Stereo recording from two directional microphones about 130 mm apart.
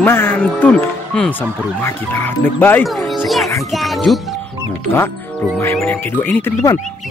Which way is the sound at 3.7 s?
Centre (ahead or behind).